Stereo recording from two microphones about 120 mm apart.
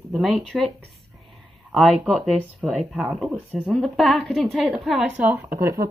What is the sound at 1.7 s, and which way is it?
Speech, centre (ahead or behind).